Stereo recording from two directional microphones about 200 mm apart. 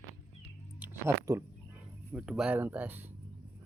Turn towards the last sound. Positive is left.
turn(degrees=-10)  # may be behind; listen again after turning